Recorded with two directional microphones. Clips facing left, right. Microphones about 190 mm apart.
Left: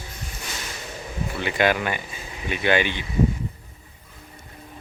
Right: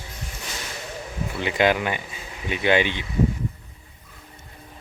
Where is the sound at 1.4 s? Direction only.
20° right (ahead or behind).